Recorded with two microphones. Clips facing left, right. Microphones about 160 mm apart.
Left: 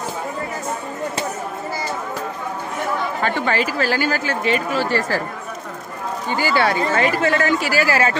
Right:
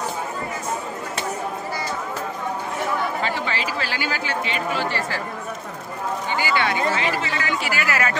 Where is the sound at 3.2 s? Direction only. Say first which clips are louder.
Left 5 dB; 50° left (ahead or behind).